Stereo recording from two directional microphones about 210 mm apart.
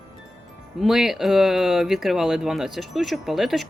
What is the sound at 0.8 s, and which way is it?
Speech, centre (ahead or behind).